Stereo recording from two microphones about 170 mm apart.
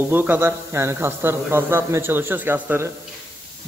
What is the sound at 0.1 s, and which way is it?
A man's voice, 10° right (ahead or behind).